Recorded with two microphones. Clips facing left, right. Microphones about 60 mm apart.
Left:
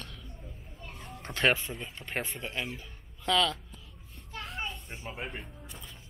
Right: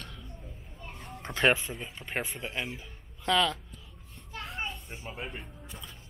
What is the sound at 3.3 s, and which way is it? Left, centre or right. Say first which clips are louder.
Speech: right 1 dB; centre.